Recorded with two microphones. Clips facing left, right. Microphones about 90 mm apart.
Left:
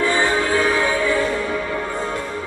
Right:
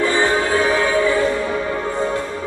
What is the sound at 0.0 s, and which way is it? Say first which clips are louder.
Music: right 1 dB; 20° right (ahead or behind).